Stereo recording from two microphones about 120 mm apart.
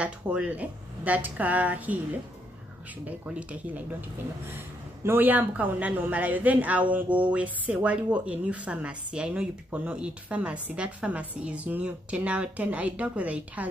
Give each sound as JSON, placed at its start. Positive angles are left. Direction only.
{"t": 0.0, "sound": "speech", "side_deg": -10}
{"t": 3.1, "sound": "speech", "side_deg": -10}
{"t": 5.0, "sound": "speech", "side_deg": -15}